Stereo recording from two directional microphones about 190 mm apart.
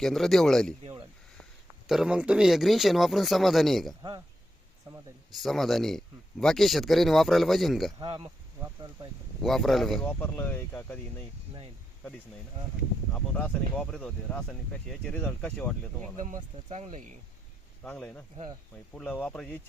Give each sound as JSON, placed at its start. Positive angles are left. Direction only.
{"t": 0.0, "sound": "speech", "side_deg": 0}
{"t": 1.9, "sound": "speech", "side_deg": -5}
{"t": 5.3, "sound": "speech", "side_deg": 0}
{"t": 7.9, "sound": "speech", "side_deg": -25}
{"t": 9.4, "sound": "speech", "side_deg": 0}
{"t": 13.1, "sound": "speech", "side_deg": 5}
{"t": 16.1, "sound": "speech", "side_deg": -40}
{"t": 16.6, "sound": "speech", "side_deg": -25}
{"t": 17.8, "sound": "speech", "side_deg": 5}